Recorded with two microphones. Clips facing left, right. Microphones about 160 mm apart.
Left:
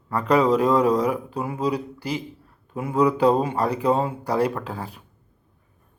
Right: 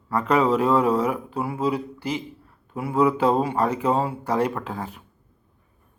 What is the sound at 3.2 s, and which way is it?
Speech, 15° left (ahead or behind).